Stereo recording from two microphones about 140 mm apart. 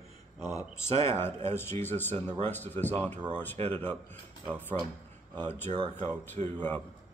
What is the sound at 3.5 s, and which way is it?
Speech, 45° right (ahead or behind).